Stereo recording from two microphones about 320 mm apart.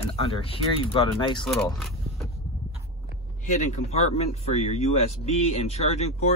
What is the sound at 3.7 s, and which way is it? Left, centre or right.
Speech, centre.